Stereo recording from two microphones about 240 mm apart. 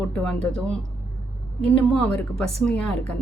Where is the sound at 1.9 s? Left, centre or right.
Centre.